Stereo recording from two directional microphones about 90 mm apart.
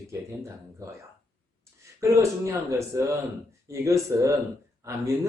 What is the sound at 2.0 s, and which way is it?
Speech, 35° right (ahead or behind).